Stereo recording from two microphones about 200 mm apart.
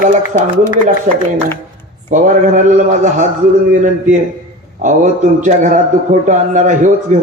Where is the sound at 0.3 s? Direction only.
40° right (ahead or behind).